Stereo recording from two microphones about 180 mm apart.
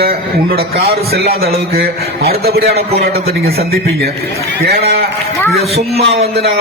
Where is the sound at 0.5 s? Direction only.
60° right (ahead or behind).